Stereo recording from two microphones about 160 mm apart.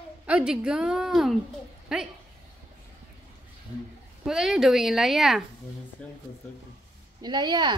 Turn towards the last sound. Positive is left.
turn(degrees=-30)  # may be behind; listen again after turning